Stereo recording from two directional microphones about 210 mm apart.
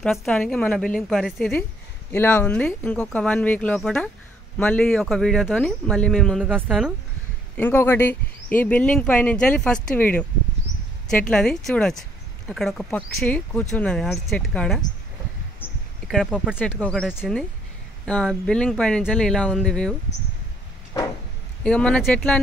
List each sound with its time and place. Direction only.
0.0 s speech: centre (ahead or behind)
7.5 s speech: 10° left (ahead or behind)
16.1 s speech: centre (ahead or behind)
20.9 s a sound: 20° left (ahead or behind)
21.6 s speech: 5° left (ahead or behind)